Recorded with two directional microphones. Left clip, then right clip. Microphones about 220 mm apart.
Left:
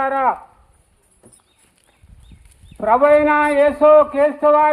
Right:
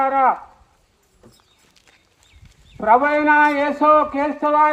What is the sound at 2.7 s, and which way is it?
Speech, 35° left (ahead or behind).